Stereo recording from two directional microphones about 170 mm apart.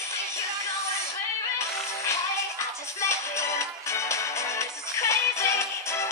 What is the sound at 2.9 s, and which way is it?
Music, 15° left (ahead or behind).